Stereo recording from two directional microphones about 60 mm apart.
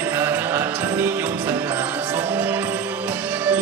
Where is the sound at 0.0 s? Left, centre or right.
Right.